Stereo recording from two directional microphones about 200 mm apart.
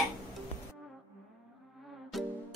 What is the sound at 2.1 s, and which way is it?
Music, centre (ahead or behind).